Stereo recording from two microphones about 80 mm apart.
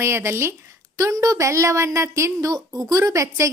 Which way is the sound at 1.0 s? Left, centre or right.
Right.